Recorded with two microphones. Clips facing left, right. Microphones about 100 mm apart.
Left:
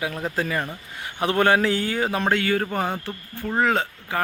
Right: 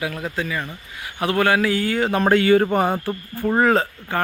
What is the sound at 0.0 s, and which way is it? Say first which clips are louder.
Speech: right 1 dB; 25° left (ahead or behind).